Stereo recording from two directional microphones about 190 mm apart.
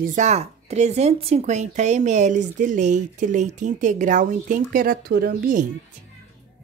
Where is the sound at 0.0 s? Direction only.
40° right (ahead or behind).